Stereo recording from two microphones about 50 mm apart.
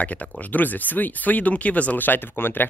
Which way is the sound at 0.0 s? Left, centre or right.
Left.